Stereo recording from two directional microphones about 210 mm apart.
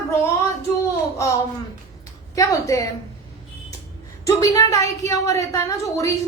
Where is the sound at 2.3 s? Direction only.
15° left (ahead or behind).